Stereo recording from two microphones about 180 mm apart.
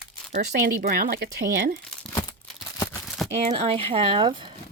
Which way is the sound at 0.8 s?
55° right (ahead or behind).